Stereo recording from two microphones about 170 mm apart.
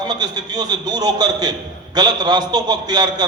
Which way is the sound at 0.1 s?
25° right (ahead or behind).